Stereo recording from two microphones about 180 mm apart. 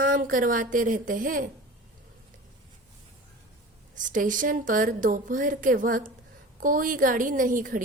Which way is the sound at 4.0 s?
45° right (ahead or behind).